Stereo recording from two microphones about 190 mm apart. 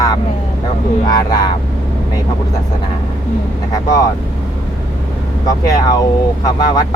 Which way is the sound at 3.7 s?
15° left (ahead or behind).